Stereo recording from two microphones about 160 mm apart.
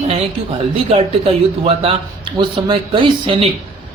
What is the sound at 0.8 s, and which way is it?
Speech, 35° right (ahead or behind).